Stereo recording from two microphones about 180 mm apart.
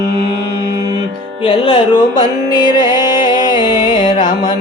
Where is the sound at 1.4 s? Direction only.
30° left (ahead or behind).